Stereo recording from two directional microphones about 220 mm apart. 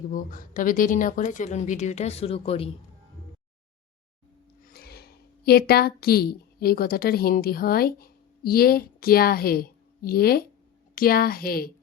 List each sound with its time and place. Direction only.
0.1 s speech: 35° left (ahead or behind)
4.6 s a woman's voice: 45° left (ahead or behind)